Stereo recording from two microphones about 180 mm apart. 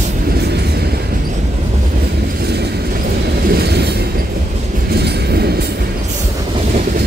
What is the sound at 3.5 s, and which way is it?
Train, 65° right (ahead or behind).